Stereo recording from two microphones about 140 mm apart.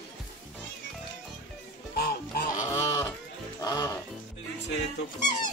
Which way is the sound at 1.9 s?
90° left.